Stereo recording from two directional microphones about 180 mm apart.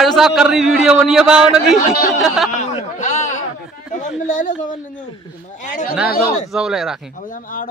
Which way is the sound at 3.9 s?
45° left (ahead or behind).